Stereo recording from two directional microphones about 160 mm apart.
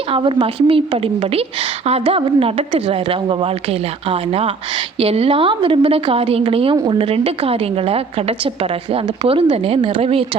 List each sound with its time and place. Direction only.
0.1 s a woman's voice: 30° right (ahead or behind)